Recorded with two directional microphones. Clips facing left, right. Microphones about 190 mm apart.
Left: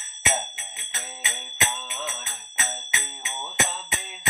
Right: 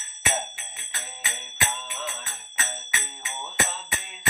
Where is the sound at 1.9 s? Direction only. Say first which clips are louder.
Left 1 dB; 20° left (ahead or behind).